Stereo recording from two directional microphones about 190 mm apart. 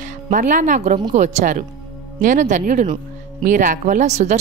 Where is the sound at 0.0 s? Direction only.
40° right (ahead or behind).